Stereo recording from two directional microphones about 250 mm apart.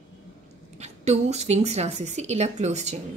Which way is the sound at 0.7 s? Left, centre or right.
Right.